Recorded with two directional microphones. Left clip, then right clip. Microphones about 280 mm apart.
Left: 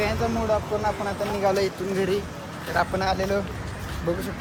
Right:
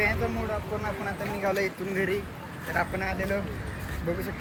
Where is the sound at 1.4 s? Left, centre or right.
Centre.